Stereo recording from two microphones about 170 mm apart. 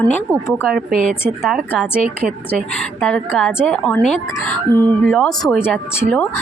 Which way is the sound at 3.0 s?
5° left (ahead or behind).